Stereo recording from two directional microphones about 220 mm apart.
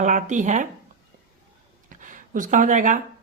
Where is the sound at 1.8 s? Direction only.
35° right (ahead or behind).